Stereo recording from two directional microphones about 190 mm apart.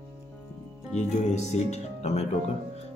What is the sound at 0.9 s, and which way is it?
Speech, 35° left (ahead or behind).